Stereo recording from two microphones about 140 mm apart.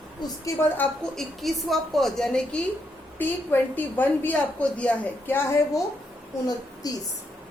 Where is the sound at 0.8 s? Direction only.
Centre (ahead or behind).